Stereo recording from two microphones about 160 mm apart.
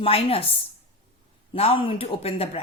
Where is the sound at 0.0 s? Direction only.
35° left (ahead or behind).